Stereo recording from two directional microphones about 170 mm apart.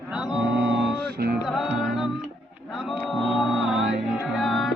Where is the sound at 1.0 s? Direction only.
70° right (ahead or behind).